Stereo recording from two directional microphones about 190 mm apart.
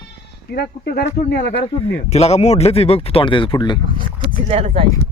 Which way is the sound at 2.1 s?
35° left (ahead or behind).